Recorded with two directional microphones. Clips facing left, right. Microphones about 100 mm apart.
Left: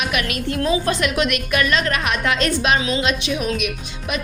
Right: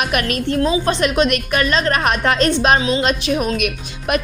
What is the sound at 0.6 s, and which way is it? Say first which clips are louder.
A woman's voice: right 1 dB; 25° right (ahead or behind).